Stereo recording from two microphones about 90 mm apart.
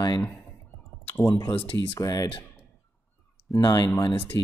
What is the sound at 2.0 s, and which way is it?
Speech, 45° left (ahead or behind).